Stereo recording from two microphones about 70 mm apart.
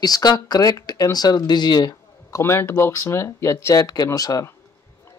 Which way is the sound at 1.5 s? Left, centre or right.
Left.